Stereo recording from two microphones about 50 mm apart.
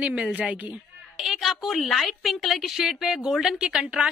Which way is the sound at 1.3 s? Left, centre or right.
Centre.